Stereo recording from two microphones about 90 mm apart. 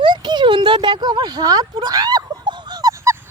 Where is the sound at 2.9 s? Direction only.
30° right (ahead or behind).